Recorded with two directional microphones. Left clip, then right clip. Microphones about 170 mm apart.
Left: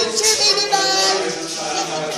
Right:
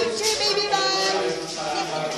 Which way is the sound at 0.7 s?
10° left (ahead or behind).